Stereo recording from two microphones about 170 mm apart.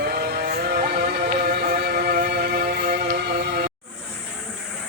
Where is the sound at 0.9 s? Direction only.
60° right (ahead or behind).